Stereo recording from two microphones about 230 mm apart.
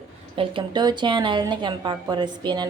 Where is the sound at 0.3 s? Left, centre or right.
Right.